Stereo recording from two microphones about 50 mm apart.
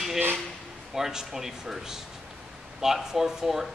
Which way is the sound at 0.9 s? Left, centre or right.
Centre.